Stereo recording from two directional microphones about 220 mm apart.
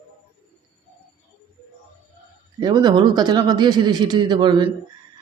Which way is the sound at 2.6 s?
20° right (ahead or behind).